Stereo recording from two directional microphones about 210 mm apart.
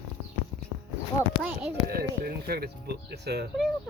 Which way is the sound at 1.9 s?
45° right (ahead or behind).